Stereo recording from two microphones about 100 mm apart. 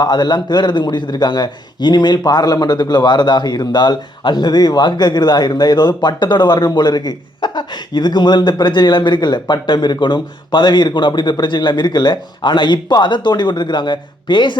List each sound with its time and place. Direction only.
0.0 s a man's voice: 45° left (ahead or behind)